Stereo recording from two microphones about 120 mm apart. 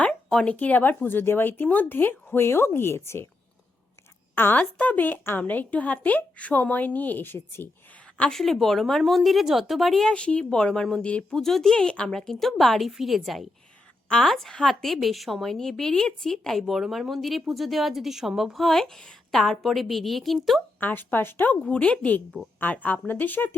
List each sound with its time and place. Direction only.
0.0 s a woman's voice: 10° left (ahead or behind)
4.4 s a woman's voice: 15° left (ahead or behind)
8.2 s speech: 5° left (ahead or behind)
20.7 s a woman's voice: 15° left (ahead or behind)